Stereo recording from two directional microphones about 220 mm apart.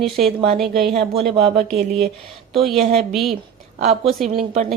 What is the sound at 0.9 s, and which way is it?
Speech, 25° right (ahead or behind).